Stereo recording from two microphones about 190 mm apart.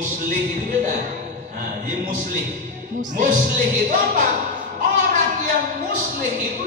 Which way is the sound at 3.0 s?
45° right (ahead or behind).